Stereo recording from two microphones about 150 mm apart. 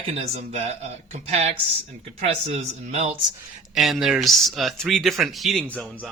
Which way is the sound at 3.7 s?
Centre (ahead or behind).